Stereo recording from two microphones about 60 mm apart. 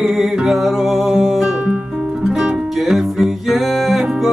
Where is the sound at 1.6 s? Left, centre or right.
Right.